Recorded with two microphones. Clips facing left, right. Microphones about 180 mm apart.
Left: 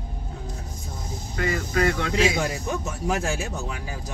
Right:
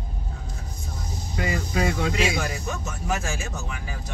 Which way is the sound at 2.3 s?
25° left (ahead or behind).